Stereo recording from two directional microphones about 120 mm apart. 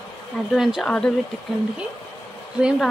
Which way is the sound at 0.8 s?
10° left (ahead or behind).